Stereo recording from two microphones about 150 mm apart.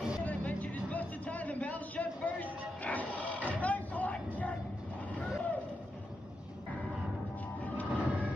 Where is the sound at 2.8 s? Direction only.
10° left (ahead or behind).